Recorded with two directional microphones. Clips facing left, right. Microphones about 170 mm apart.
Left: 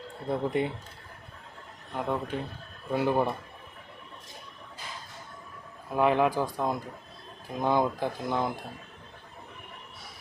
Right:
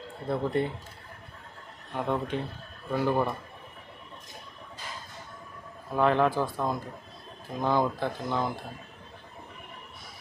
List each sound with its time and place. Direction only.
0.3 s speech: 15° left (ahead or behind)
1.9 s speech: 5° left (ahead or behind)
2.9 s a man's voice: 20° left (ahead or behind)
5.9 s speech: 10° left (ahead or behind)